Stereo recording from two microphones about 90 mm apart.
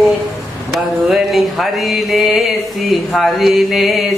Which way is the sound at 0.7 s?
Centre (ahead or behind).